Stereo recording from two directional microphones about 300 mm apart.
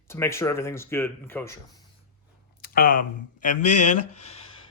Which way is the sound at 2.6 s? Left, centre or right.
Left.